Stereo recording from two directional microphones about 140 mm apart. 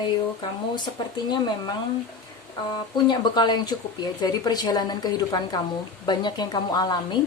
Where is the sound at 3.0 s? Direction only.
30° left (ahead or behind).